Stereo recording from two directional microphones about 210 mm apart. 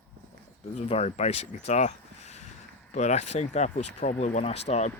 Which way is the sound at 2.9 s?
35° left (ahead or behind).